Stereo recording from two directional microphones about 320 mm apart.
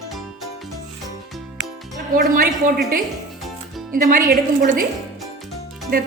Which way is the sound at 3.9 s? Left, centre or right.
Right.